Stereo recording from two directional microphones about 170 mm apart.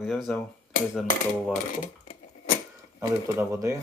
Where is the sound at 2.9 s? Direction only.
15° right (ahead or behind).